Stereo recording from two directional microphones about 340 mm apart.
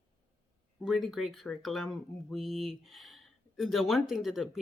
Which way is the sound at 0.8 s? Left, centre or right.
Centre.